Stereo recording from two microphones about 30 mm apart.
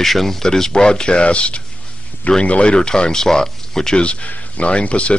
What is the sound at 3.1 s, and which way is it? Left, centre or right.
Speech, centre.